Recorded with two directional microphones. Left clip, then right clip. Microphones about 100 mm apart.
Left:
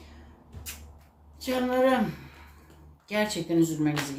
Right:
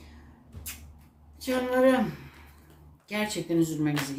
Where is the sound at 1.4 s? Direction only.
20° left (ahead or behind).